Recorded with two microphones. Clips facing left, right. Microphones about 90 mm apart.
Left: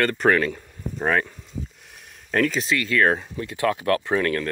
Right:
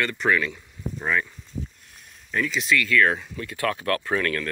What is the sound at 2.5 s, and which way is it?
Speech, 30° left (ahead or behind).